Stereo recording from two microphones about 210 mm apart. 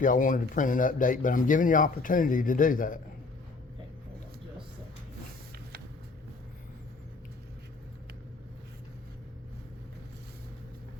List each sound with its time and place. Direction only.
0.0 s speech: 40° left (ahead or behind)